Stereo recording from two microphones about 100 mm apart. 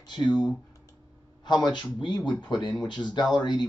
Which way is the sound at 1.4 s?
45° left (ahead or behind).